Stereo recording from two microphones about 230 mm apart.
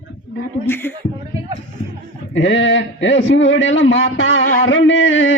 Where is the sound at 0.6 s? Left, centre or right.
Centre.